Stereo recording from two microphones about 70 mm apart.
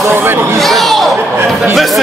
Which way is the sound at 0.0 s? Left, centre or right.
Right.